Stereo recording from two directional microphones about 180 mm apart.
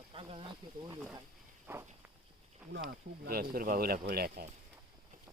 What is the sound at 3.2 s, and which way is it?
Speech, 55° right (ahead or behind).